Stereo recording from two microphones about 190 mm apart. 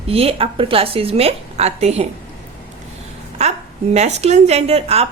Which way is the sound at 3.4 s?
35° right (ahead or behind).